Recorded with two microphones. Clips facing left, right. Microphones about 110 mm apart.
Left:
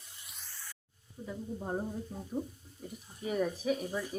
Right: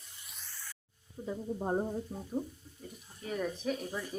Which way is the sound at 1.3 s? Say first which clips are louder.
Right 4 dB; 25° right (ahead or behind).